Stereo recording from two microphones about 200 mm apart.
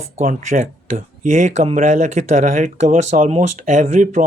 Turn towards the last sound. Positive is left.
turn(degrees=-35)  # may be behind; listen again after turning